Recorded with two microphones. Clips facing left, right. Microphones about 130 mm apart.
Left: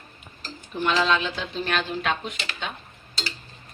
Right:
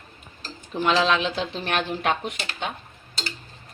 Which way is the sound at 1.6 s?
60° right (ahead or behind).